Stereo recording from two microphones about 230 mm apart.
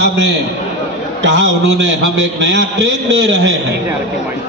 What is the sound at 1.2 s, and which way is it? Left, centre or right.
A man's voice, right.